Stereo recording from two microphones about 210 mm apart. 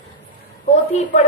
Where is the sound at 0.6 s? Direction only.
35° left (ahead or behind).